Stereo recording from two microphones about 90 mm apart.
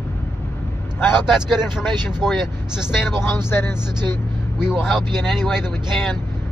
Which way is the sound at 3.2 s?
25° left (ahead or behind).